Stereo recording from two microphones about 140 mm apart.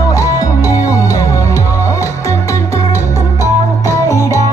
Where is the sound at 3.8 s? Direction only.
25° left (ahead or behind).